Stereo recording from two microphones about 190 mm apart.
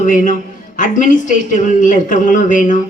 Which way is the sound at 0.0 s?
45° left (ahead or behind).